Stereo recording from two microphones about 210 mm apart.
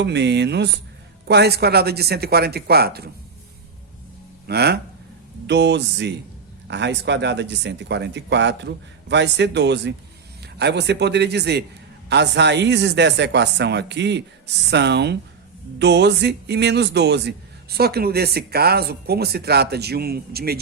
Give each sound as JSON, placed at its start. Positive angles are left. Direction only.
{"t": 0.0, "sound": "a man's voice", "side_deg": -55}
{"t": 4.4, "sound": "a man's voice", "side_deg": -50}